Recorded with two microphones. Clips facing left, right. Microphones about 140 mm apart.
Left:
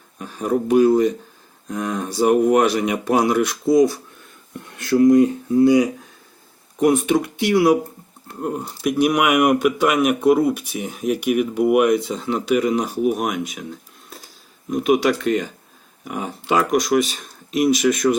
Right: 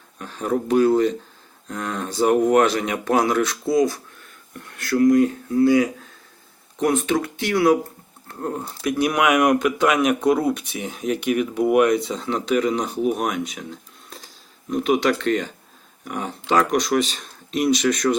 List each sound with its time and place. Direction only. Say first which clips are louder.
0.2 s speech: left 2 dB; 10° left (ahead or behind)